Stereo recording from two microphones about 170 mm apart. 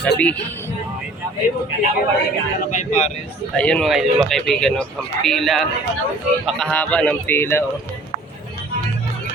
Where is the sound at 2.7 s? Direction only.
45° left (ahead or behind).